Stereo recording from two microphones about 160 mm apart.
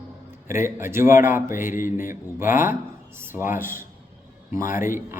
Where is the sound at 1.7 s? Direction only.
55° left (ahead or behind).